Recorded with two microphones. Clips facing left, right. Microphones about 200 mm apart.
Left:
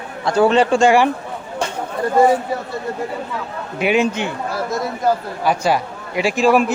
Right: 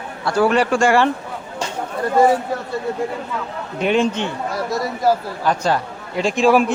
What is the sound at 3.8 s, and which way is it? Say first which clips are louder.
Speech: left 1 dB; 10° left (ahead or behind).